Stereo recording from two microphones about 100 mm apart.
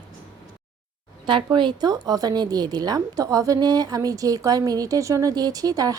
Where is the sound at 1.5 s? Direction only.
45° right (ahead or behind).